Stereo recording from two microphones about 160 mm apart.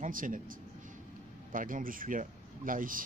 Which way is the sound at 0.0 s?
60° right (ahead or behind).